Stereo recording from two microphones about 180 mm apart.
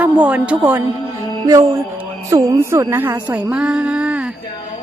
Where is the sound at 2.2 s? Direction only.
20° right (ahead or behind).